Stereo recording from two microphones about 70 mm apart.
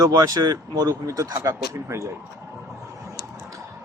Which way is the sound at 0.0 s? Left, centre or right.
Right.